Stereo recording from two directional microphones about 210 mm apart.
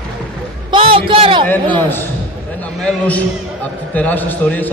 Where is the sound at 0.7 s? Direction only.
25° right (ahead or behind).